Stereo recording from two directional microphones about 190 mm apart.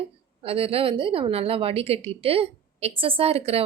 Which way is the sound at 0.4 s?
30° right (ahead or behind).